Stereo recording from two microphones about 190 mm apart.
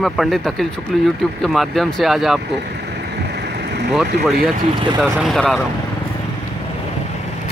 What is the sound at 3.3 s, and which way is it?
Vehicle, 60° right (ahead or behind).